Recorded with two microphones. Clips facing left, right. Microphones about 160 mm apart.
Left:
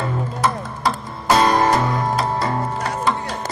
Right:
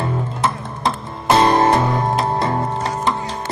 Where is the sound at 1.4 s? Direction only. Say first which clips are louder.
Right 3 dB; 25° right (ahead or behind).